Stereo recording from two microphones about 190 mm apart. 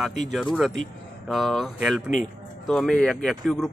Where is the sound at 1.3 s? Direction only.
Centre (ahead or behind).